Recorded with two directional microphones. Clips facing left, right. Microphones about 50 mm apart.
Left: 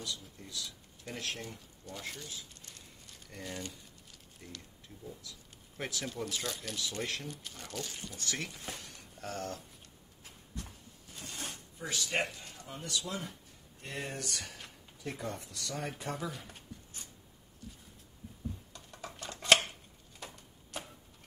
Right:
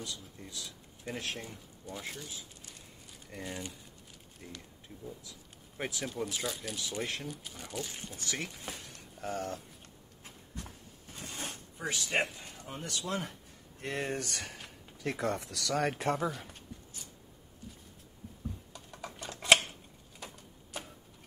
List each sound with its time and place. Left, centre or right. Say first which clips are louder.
0.4 s speech: left 1 dB; centre
7.9 s speech: right 1 dB; right
8.2 s speech: right 1 dB; centre
9.2 s speech: right 3 dB; centre
10.2 s a sound: right 1 dB; right
12.8 s speech: right 2 dB; right
15.0 s speech: right 6 dB; right
16.3 s speech: right 5 dB; centre
18.7 s typing: right 2 dB; centre
20.2 s typewriter: right 1 dB; centre